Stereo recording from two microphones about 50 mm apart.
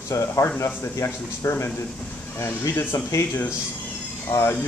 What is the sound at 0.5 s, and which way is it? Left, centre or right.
Speech, left.